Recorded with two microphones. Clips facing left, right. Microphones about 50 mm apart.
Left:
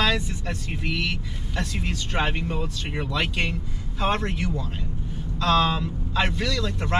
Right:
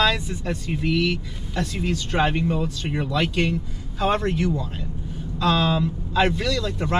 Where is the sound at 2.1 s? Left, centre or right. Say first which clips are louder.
Right 4 dB; centre.